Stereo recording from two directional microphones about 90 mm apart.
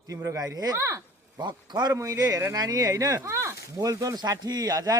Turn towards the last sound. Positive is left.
turn(degrees=-45)  # may be behind; listen again after turning